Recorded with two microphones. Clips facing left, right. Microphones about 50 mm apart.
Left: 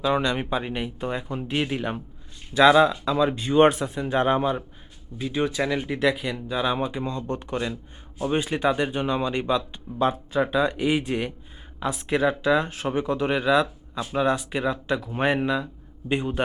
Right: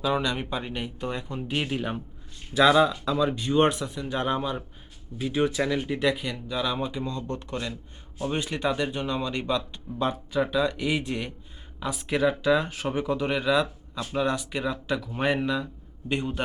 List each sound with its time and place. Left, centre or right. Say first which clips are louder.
0.0 s speech: left 3 dB; centre
0.3 s speech: left 4 dB; centre
3.7 s speech: left 5 dB; left
5.2 s speech: even; centre; by 11.3 s left
11.9 s speech: left 2 dB; centre